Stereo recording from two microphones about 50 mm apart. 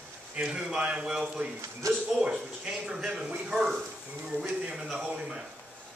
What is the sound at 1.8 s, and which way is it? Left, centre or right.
Speech, right.